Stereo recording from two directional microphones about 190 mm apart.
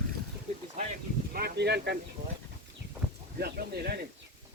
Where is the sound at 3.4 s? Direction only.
55° right (ahead or behind).